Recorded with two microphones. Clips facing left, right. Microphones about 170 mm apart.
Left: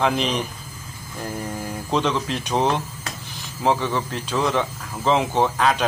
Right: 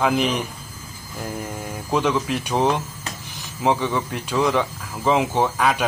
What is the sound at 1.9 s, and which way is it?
A man's voice, 10° right (ahead or behind).